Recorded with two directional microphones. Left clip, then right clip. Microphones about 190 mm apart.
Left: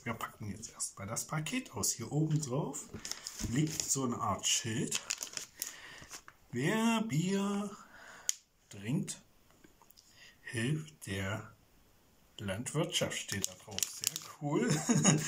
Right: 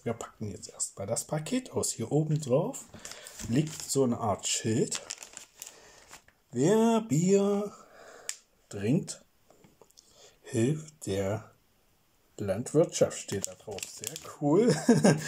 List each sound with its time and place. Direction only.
0.0 s speech: 35° right (ahead or behind)
5.1 s crumpling: 15° right (ahead or behind)
6.6 s speech: 35° right (ahead or behind)
8.6 s a sound: 35° right (ahead or behind)
10.4 s speech: 35° right (ahead or behind)